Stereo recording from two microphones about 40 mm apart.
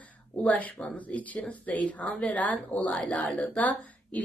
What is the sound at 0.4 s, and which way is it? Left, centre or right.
Speech, left.